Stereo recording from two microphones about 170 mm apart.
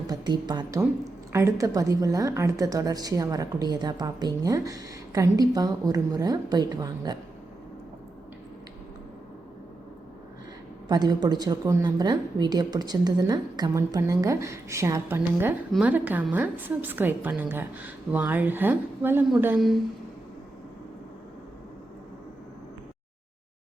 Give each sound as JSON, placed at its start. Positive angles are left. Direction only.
{"t": 0.1, "sound": "a woman's voice", "side_deg": -25}
{"t": 10.8, "sound": "a woman's voice", "side_deg": -25}
{"t": 19.5, "sound": "speech", "side_deg": 0}